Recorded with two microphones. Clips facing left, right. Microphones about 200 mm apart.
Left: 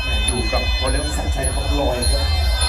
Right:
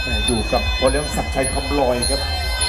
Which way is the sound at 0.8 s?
60° right (ahead or behind).